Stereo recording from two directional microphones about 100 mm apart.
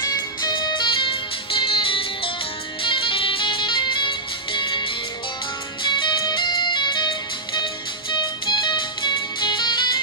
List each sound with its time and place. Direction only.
0.4 s music: 45° left (ahead or behind)